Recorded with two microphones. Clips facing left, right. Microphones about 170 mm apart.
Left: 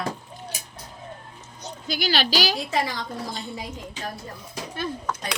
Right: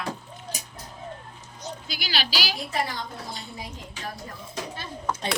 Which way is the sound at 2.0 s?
45° left (ahead or behind).